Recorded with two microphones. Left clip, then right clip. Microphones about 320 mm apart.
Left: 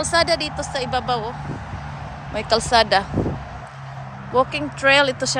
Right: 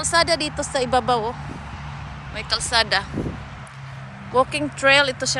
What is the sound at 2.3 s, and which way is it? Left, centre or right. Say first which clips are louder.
Speech: left 4 dB; centre.